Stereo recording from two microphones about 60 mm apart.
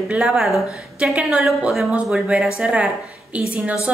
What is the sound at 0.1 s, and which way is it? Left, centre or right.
Speech, centre.